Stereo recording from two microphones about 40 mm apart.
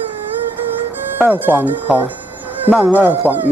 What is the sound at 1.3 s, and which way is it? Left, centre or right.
Speech, right.